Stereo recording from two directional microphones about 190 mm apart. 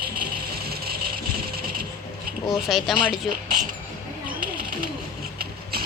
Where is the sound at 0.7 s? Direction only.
50° right (ahead or behind).